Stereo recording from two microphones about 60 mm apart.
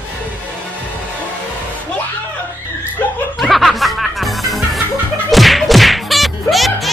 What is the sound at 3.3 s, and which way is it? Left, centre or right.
Music, centre.